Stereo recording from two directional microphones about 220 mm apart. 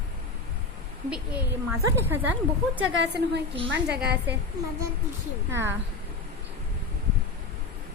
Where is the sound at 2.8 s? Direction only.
55° right (ahead or behind).